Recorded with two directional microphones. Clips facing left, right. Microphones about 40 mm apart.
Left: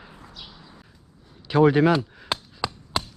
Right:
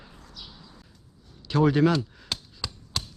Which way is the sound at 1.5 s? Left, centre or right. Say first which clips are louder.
Left 4 dB; centre.